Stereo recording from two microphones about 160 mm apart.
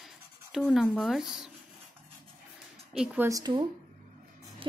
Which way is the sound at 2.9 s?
5° right (ahead or behind).